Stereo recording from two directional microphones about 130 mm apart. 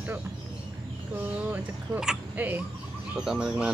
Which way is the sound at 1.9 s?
10° right (ahead or behind).